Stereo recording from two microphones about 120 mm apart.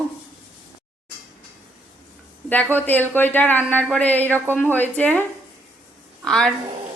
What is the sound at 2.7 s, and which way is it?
A woman's voice, 15° left (ahead or behind).